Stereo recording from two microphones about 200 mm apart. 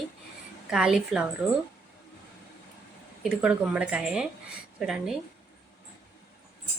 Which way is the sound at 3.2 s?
5° right (ahead or behind).